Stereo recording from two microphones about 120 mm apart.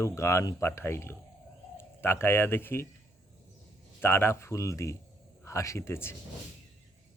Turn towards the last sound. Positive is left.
turn(degrees=20)  # may be behind; listen again after turning